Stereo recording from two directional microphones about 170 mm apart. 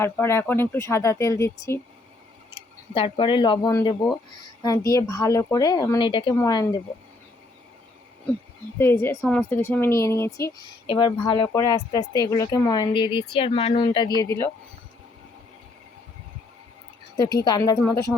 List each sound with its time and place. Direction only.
0.0 s speech: 15° left (ahead or behind)
2.9 s speech: 30° left (ahead or behind)
8.8 s speech: 15° left (ahead or behind)
10.8 s speech: 30° left (ahead or behind)
14.2 s speech: 15° left (ahead or behind)
17.4 s speech: 25° left (ahead or behind)